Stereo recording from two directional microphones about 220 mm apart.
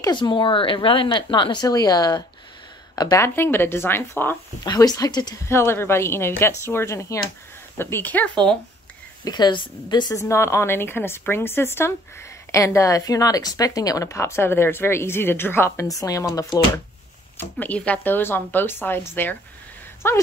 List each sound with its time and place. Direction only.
0.0 s speech: 20° left (ahead or behind)
9.2 s speech: 20° left (ahead or behind)